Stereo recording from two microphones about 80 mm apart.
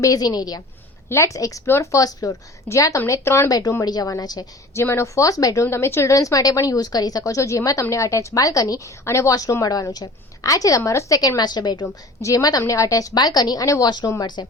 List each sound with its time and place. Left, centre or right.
0.0 s a woman's voice: left
1.1 s a woman's voice: left
1.6 s a woman's voice: left
3.8 s a woman's voice: left
4.7 s speech: left
5.6 s a woman's voice: left
9.0 s speech: left
9.3 s a woman's voice: left
12.2 s a woman's voice: left
13.7 s a woman's voice: left
14.2 s a woman's voice: left